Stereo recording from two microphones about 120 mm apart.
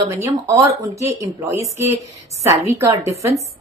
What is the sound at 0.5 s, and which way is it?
A woman's voice, 25° right (ahead or behind).